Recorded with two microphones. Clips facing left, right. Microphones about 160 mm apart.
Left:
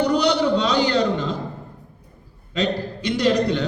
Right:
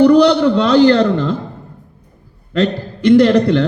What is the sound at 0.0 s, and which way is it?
A man's voice, 60° right (ahead or behind).